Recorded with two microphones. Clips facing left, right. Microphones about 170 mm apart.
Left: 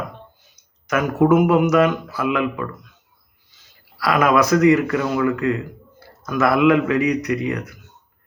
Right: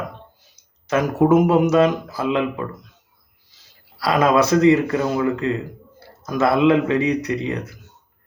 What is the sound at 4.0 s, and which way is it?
Speech, 30° right (ahead or behind).